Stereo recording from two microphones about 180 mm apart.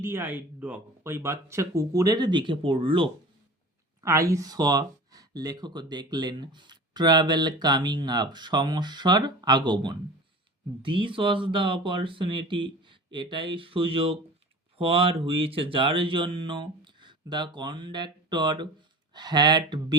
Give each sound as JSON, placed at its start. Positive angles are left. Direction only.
{"t": 0.0, "sound": "speech", "side_deg": -15}
{"t": 4.0, "sound": "speech", "side_deg": -15}